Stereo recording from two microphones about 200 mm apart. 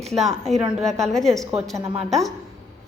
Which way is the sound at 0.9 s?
Centre (ahead or behind).